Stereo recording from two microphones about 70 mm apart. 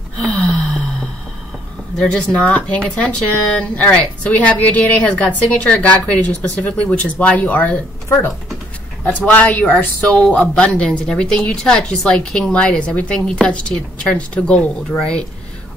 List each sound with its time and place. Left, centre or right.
0.2 s gasp: centre
2.0 s speech: centre
10.5 s speech: centre